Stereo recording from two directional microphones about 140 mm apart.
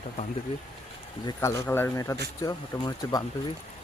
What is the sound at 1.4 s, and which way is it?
Speech, 15° left (ahead or behind).